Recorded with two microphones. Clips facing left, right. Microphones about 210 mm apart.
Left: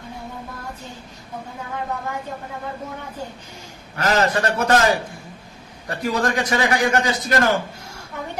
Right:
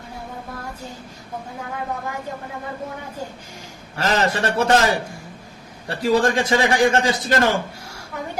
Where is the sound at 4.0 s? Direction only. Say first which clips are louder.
Left 1 dB; 25° right (ahead or behind).